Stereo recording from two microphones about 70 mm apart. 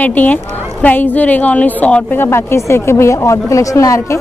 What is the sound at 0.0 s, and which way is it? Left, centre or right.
A woman's voice, left.